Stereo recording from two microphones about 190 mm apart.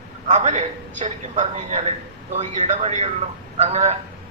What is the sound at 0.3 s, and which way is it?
A man's voice, 35° right (ahead or behind).